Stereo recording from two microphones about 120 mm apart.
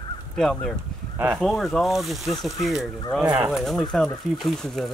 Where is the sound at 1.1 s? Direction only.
15° right (ahead or behind).